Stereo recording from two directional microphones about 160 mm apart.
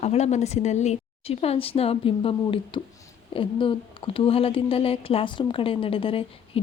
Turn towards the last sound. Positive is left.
turn(degrees=35)  # may be behind; listen again after turning